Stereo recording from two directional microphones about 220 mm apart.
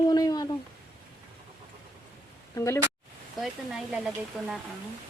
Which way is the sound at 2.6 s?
15° left (ahead or behind).